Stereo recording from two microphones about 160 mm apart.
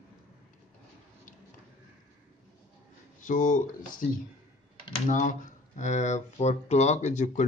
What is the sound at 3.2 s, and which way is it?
Speech, 55° left (ahead or behind).